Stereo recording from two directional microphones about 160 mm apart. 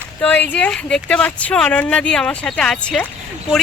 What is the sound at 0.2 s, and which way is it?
Speech, 10° left (ahead or behind).